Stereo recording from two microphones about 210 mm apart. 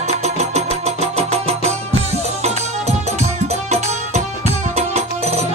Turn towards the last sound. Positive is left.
turn(degrees=-30)  # may be behind; listen again after turning